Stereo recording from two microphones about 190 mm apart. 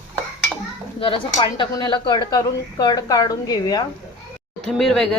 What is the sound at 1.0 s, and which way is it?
Speech, 25° left (ahead or behind).